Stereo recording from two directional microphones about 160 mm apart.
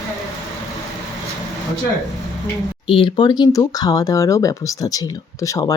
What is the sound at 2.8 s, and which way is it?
Speech, 35° left (ahead or behind).